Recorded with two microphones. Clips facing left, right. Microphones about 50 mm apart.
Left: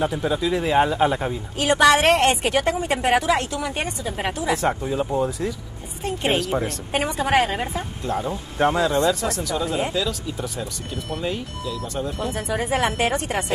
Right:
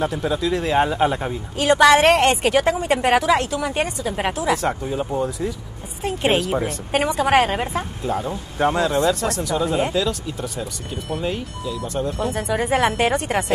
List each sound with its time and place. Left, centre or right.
0.0 s speech: centre
0.8 s speech: centre
7.2 s a woman's voice: centre
8.0 s speech: centre
9.4 s speech: centre